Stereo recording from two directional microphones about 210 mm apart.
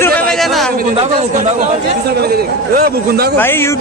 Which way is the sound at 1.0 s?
30° right (ahead or behind).